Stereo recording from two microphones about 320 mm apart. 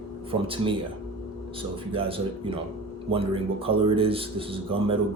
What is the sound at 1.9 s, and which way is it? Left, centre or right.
Speech, centre.